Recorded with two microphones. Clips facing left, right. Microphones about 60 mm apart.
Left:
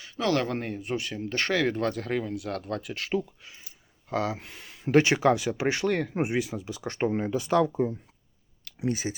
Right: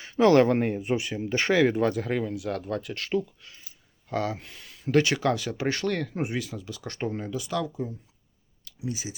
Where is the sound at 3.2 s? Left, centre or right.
Centre.